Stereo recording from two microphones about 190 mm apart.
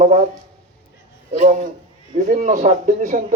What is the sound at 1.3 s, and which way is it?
Speech, 45° right (ahead or behind).